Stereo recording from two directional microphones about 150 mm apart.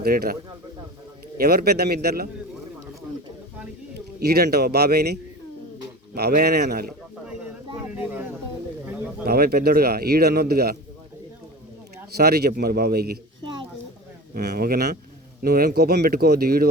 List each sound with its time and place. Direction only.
0.0 s speech: 85° right
1.4 s a man's voice: 90° right
4.2 s a man's voice: 90° right
6.1 s a man's voice: 90° right
7.9 s a sound: 10° right (ahead or behind)
8.9 s bird: 5° right (ahead or behind)
9.2 s a man's voice: 85° right
12.1 s a man's voice: 90° right
14.3 s a man's voice: 90° right